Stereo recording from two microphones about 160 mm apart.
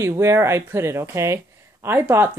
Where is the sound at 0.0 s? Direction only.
15° right (ahead or behind).